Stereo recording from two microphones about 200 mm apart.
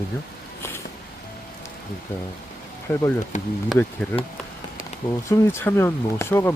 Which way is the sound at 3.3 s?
35° left (ahead or behind).